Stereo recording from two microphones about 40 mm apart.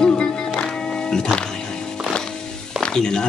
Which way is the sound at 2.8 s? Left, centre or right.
Centre.